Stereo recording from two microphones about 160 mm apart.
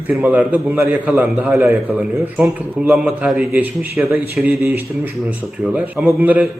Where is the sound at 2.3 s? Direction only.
Centre (ahead or behind).